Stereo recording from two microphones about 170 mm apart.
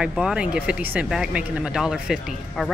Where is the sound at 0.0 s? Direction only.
5° right (ahead or behind).